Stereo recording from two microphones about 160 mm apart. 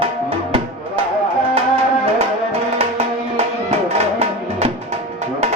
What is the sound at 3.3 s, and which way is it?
Music, 40° right (ahead or behind).